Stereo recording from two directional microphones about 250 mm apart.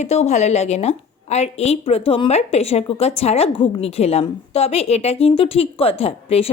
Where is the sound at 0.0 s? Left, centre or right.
Left.